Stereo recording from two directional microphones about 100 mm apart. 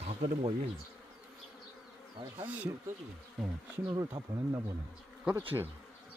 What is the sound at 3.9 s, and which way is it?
Speech, 45° right (ahead or behind).